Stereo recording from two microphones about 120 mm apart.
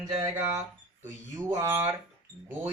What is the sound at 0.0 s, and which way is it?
Speech, 30° right (ahead or behind).